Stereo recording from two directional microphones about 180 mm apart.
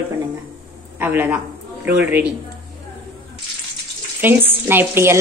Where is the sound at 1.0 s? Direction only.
10° right (ahead or behind).